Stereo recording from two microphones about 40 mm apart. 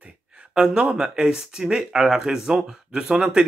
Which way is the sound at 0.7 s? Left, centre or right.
Right.